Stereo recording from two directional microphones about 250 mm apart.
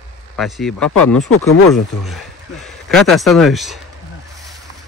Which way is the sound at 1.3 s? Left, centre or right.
Left.